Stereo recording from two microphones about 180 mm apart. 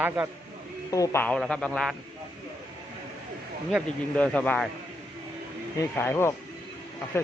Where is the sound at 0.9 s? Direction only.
20° left (ahead or behind).